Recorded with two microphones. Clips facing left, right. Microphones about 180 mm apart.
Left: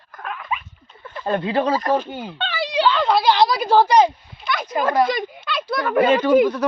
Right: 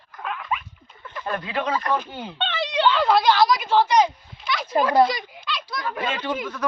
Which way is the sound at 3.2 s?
20° left (ahead or behind).